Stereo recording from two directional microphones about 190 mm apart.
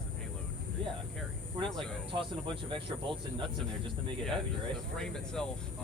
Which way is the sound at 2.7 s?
25° right (ahead or behind).